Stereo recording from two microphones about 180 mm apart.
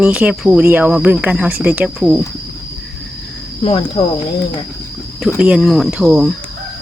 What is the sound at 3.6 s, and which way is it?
Speech, 30° left (ahead or behind).